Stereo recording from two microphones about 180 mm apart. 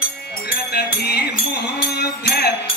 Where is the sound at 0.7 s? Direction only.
65° left (ahead or behind).